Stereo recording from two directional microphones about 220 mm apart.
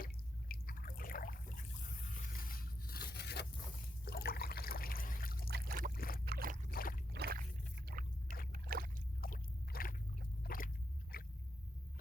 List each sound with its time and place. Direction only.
0.0 s drip: 40° left (ahead or behind)
2.1 s zipper: 40° left (ahead or behind)
4.0 s trickle: 45° left (ahead or behind)
5.5 s boat: 45° right (ahead or behind)
5.9 s boat: 40° left (ahead or behind)
6.2 s boat: 40° right (ahead or behind)
6.7 s boat: 40° left (ahead or behind)
7.1 s rowboat: 45° right (ahead or behind)
8.5 s boat: 40° right (ahead or behind)
9.2 s a sound: 40° left (ahead or behind)